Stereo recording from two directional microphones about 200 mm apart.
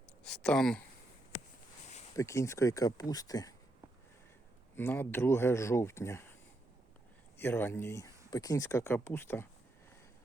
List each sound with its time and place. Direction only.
0.3 s speech: 5° left (ahead or behind)
2.1 s speech: 15° left (ahead or behind)
4.8 s speech: 10° left (ahead or behind)
7.3 s speech: 10° left (ahead or behind)